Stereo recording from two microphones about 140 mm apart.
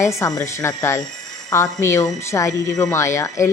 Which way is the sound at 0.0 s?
20° left (ahead or behind).